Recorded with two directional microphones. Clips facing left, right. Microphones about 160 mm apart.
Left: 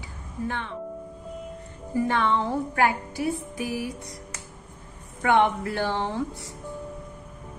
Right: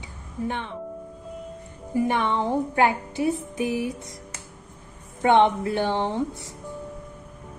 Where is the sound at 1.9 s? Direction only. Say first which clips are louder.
Right 1 dB; 15° right (ahead or behind).